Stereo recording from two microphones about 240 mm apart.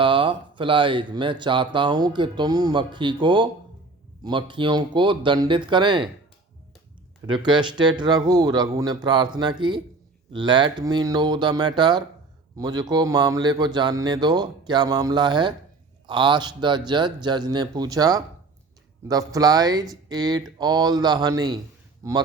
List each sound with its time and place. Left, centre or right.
0.0 s speech: right
7.3 s speech: centre